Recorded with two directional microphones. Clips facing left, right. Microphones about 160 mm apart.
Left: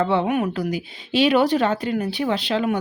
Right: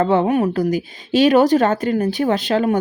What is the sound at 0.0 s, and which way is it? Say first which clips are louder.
Speech: right 4 dB; 45° right (ahead or behind).